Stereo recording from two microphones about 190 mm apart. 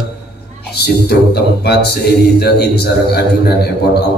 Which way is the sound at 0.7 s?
60° left (ahead or behind).